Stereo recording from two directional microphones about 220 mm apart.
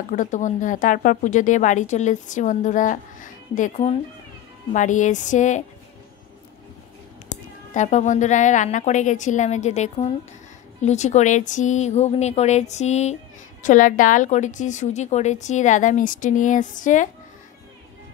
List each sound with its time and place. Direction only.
0.1 s speech: 35° left (ahead or behind)
7.2 s speech: 35° left (ahead or behind)